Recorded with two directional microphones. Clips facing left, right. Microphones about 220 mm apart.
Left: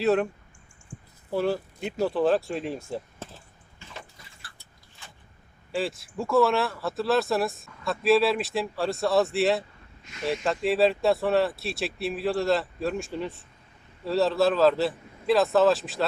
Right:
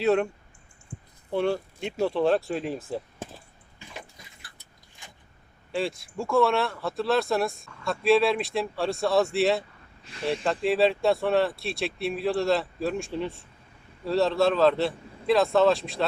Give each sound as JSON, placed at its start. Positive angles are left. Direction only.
{"t": 0.0, "sound": "speech", "side_deg": 0}
{"t": 1.3, "sound": "speech", "side_deg": 5}
{"t": 3.8, "sound": "water", "side_deg": -15}
{"t": 5.0, "sound": "vehicle", "side_deg": -15}
{"t": 5.7, "sound": "speech", "side_deg": 0}
{"t": 10.0, "sound": "speech", "side_deg": -30}
{"t": 10.4, "sound": "speech", "side_deg": 0}